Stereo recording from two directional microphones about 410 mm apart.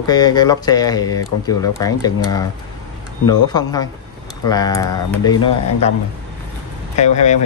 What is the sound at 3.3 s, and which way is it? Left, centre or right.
Speech, centre.